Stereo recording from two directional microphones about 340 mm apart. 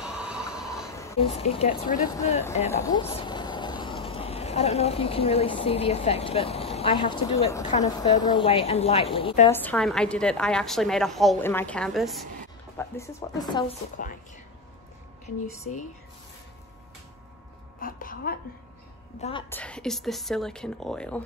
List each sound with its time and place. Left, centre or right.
0.0 s a sound: centre
0.9 s speech: centre
9.5 s a woman's voice: centre
14.0 s speech: left
15.2 s speech: centre
17.7 s a woman's voice: left
19.2 s speech: centre
19.6 s a woman's voice: centre